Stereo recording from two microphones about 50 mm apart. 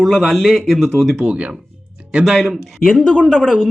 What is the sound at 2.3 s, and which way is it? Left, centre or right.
Speech, centre.